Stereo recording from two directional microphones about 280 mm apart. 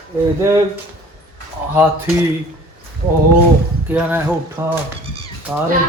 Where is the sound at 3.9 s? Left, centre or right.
Centre.